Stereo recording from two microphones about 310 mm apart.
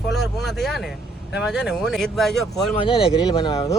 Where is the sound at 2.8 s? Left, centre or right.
Centre.